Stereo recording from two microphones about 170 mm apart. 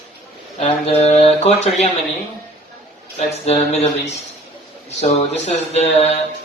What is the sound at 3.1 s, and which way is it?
Speech, 40° left (ahead or behind).